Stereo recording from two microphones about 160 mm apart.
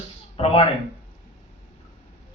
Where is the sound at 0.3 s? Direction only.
35° left (ahead or behind).